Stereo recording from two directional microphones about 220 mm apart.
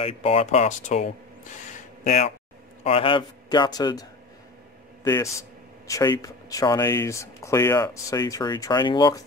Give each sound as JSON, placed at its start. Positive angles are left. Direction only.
{"t": 0.0, "sound": "a man's voice", "side_deg": 25}
{"t": 1.7, "sound": "a sound", "side_deg": 30}
{"t": 2.8, "sound": "a man's voice", "side_deg": 25}
{"t": 5.0, "sound": "speech", "side_deg": 15}